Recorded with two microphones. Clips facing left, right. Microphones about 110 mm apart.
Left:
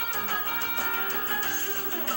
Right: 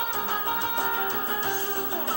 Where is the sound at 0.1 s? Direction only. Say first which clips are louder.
Right 4 dB; 20° right (ahead or behind).